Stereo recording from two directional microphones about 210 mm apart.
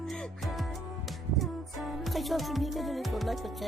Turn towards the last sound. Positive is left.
turn(degrees=0)  # may be behind; listen again after turning